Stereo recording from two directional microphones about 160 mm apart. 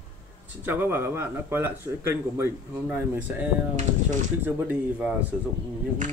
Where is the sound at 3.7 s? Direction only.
50° right (ahead or behind).